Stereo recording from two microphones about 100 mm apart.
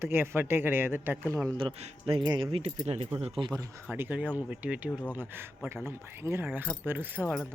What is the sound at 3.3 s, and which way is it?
Speech, 55° right (ahead or behind).